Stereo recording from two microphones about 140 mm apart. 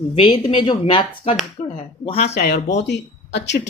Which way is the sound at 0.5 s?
35° left (ahead or behind).